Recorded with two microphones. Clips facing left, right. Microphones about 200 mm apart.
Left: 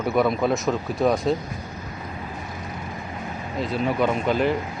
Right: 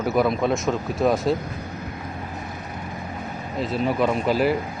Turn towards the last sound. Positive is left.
turn(degrees=-5)  # may be behind; listen again after turning